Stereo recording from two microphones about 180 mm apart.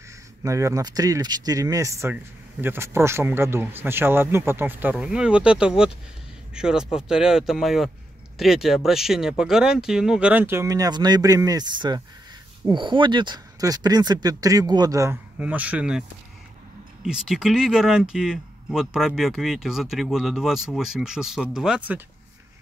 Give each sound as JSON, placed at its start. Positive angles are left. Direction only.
{"t": 0.4, "sound": "speech", "side_deg": -15}
{"t": 17.0, "sound": "speech", "side_deg": 0}